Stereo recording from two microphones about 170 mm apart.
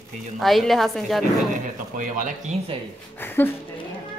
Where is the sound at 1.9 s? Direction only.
50° right (ahead or behind).